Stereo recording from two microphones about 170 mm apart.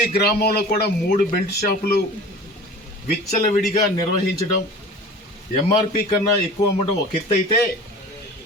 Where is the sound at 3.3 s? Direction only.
50° left (ahead or behind).